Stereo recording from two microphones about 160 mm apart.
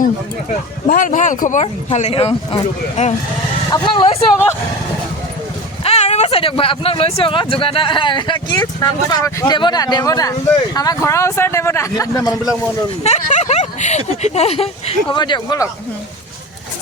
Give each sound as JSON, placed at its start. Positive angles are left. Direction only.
{"t": 0.9, "sound": "speech", "side_deg": 55}
{"t": 1.6, "sound": "speech", "side_deg": 45}
{"t": 3.0, "sound": "speech", "side_deg": 50}
{"t": 3.7, "sound": "speech", "side_deg": 30}
{"t": 5.8, "sound": "a man's voice", "side_deg": 40}
{"t": 13.0, "sound": "speech", "side_deg": 45}
{"t": 15.2, "sound": "speech", "side_deg": 25}